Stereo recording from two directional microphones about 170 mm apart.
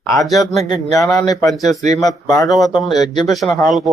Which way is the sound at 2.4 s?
Centre (ahead or behind).